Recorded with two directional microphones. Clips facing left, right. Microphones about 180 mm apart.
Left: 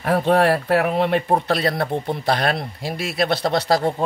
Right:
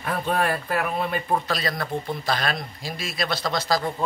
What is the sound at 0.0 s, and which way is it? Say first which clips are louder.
Speech: left 8 dB; 75° left (ahead or behind).